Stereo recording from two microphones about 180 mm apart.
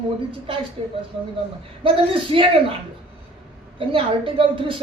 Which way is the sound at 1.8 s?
30° right (ahead or behind).